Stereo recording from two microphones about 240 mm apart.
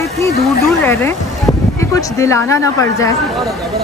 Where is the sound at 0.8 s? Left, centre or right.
Centre.